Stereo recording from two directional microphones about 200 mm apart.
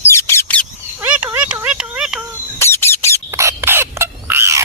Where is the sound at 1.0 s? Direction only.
10° right (ahead or behind).